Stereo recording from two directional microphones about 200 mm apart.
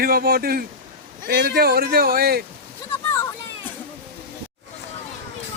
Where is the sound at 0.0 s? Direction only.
50° right (ahead or behind).